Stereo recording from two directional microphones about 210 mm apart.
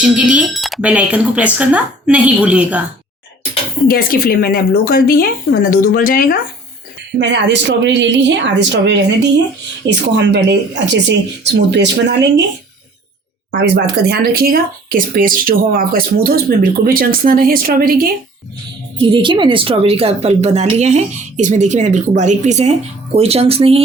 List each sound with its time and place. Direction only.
0.0 s speech: 5° right (ahead or behind)
3.8 s speech: 45° left (ahead or behind)
7.2 s speech: 55° right (ahead or behind)
13.6 s speech: 50° right (ahead or behind)
19.1 s speech: 25° right (ahead or behind)